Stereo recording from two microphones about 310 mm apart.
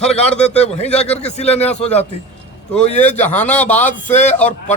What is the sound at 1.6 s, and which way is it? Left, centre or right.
A man's voice, centre.